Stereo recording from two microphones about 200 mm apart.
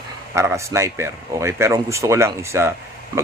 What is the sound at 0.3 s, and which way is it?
Speech, 15° right (ahead or behind).